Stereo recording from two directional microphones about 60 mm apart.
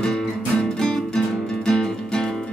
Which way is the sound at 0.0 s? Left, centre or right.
Centre.